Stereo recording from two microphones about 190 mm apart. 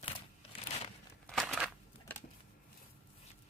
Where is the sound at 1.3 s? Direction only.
Centre (ahead or behind).